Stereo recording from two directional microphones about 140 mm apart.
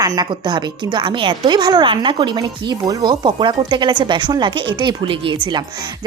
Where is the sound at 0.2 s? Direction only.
30° right (ahead or behind).